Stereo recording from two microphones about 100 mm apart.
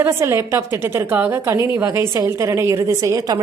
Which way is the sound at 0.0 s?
25° right (ahead or behind).